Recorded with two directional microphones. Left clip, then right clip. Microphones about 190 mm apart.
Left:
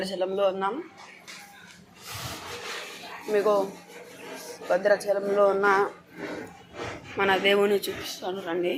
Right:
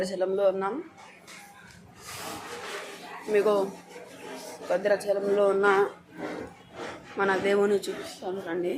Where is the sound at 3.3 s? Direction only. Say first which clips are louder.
Left 1 dB; 20° right (ahead or behind).